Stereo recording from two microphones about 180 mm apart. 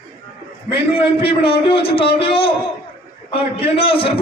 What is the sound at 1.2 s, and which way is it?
A man's voice, 30° left (ahead or behind).